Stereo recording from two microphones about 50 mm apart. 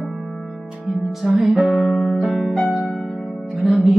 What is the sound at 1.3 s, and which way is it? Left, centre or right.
Music, centre.